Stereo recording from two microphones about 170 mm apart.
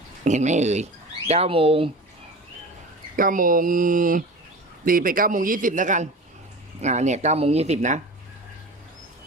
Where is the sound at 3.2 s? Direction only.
55° right (ahead or behind).